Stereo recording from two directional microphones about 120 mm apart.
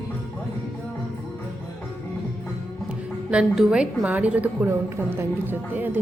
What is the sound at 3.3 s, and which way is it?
A woman's voice, 5° right (ahead or behind).